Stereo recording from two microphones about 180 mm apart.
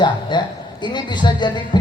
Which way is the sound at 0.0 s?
25° left (ahead or behind).